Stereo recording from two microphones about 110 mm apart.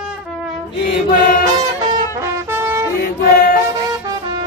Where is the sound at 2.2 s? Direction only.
20° right (ahead or behind).